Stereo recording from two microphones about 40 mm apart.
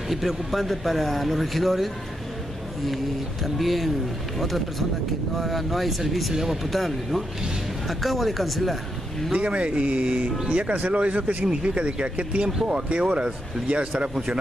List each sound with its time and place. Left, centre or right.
0.1 s speech: centre
3.4 s speech: centre
9.4 s speech: right